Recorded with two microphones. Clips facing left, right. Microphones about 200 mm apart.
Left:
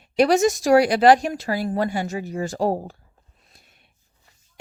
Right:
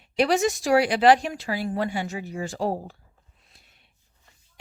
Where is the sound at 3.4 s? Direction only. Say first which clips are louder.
Left 4 dB; 45° left (ahead or behind).